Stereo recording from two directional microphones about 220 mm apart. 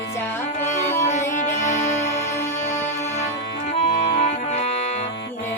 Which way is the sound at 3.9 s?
35° left (ahead or behind).